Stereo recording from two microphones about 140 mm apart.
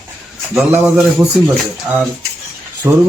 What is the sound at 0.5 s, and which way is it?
Speech, centre (ahead or behind).